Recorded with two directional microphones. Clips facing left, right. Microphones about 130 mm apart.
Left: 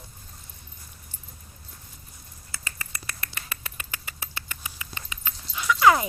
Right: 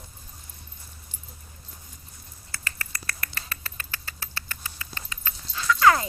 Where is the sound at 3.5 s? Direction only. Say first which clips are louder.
Even; 15° left (ahead or behind).